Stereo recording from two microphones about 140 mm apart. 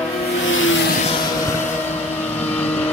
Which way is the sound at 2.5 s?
10° left (ahead or behind).